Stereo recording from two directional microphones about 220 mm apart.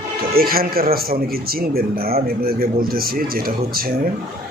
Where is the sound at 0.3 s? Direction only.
40° right (ahead or behind).